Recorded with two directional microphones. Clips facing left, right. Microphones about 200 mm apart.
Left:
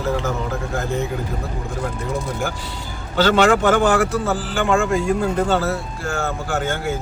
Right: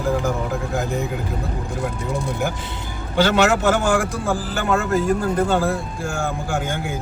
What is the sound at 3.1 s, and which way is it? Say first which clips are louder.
A man's voice: left 2 dB; 10° right (ahead or behind).